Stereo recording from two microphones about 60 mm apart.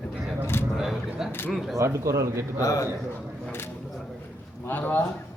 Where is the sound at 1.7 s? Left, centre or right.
Right.